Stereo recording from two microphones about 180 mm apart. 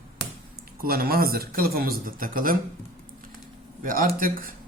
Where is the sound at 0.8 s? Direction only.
55° right (ahead or behind).